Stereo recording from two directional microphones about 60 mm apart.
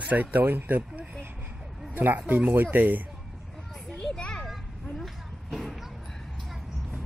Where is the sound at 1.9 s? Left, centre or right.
Right.